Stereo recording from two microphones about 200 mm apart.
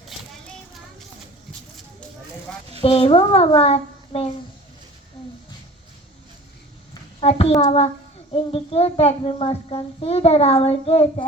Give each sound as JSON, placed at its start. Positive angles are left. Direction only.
{"t": 0.1, "sound": "child singing", "side_deg": 0}
{"t": 2.8, "sound": "a child's voice", "side_deg": 30}
{"t": 7.2, "sound": "a child's voice", "side_deg": 30}